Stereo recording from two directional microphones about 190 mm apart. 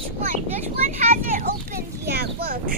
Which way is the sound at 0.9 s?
45° right (ahead or behind).